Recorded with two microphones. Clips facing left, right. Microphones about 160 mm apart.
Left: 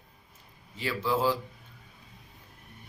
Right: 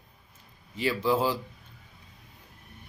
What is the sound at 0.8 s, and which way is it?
Speech, 15° right (ahead or behind).